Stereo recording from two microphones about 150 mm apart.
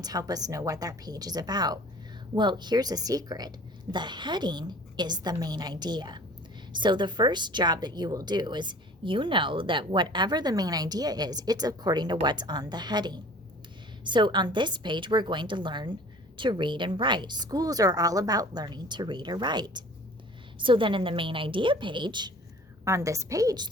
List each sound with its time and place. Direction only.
0.0 s a woman's voice: 25° right (ahead or behind)
22.8 s a woman's voice: 20° right (ahead or behind)